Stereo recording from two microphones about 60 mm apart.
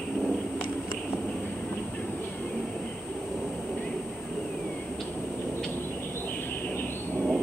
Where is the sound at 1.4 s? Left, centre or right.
Centre.